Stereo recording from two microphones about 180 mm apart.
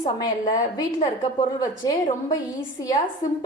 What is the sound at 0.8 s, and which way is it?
A woman's voice, 30° left (ahead or behind).